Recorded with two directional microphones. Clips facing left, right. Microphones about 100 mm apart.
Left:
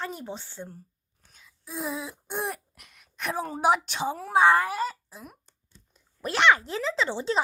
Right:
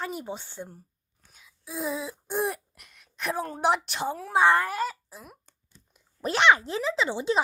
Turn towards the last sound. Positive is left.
turn(degrees=-15)  # may be behind; listen again after turning